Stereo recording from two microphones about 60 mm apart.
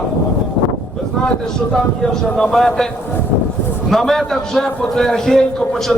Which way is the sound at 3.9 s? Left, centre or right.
Centre.